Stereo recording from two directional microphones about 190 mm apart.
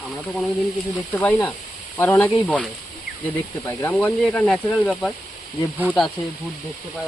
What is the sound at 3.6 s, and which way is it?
Speech, 10° left (ahead or behind).